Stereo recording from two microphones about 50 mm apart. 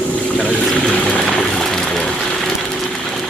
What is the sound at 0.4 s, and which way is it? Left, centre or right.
Boat, left.